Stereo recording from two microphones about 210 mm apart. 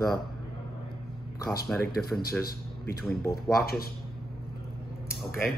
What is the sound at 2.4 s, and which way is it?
Speech, 45° left (ahead or behind).